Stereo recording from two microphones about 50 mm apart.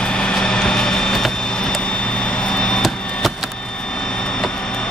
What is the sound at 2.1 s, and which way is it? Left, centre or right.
Vehicle, centre.